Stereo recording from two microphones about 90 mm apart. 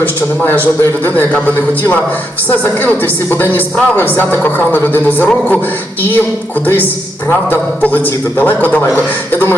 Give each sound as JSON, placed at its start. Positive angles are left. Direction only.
{"t": 0.0, "sound": "a woman's voice", "side_deg": 20}
{"t": 2.5, "sound": "a woman's voice", "side_deg": 20}
{"t": 7.3, "sound": "a woman's voice", "side_deg": 20}